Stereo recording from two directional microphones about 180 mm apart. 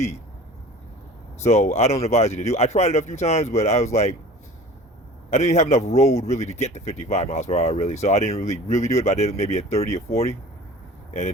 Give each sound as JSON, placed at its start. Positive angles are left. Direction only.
{"t": 1.4, "sound": "speech", "side_deg": 40}
{"t": 5.3, "sound": "speech", "side_deg": 40}